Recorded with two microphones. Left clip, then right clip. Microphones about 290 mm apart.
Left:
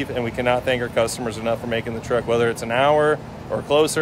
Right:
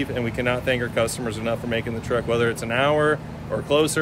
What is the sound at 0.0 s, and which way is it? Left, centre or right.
Speech, centre.